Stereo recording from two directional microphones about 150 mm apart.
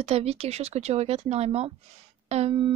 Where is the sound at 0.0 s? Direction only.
45° right (ahead or behind).